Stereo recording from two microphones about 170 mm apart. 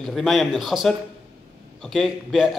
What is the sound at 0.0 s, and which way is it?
Speech, centre (ahead or behind).